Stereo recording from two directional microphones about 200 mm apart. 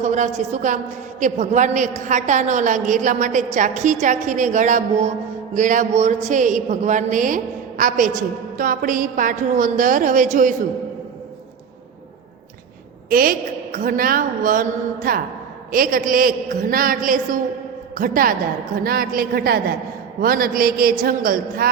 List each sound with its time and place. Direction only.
0.0 s a man's voice: 35° right (ahead or behind)
13.1 s a woman's voice: 45° right (ahead or behind)